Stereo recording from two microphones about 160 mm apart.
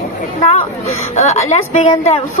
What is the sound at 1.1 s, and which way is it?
Speech, 45° left (ahead or behind).